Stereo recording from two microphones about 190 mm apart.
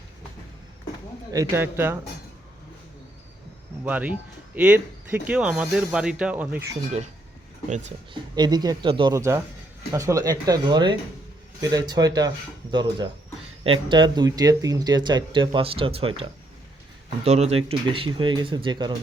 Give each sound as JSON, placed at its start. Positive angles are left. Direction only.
{"t": 1.3, "sound": "speech", "side_deg": -15}
{"t": 3.8, "sound": "speech", "side_deg": -10}
{"t": 8.1, "sound": "speech", "side_deg": -20}
{"t": 17.2, "sound": "speech", "side_deg": -35}